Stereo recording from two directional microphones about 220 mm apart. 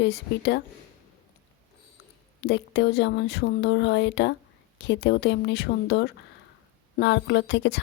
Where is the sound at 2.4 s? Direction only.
50° left (ahead or behind).